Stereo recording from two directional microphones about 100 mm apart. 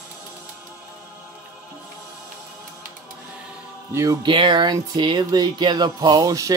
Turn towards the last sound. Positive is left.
turn(degrees=-35)  # may be behind; listen again after turning